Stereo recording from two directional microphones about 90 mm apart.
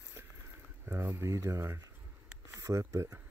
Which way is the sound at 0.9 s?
25° right (ahead or behind).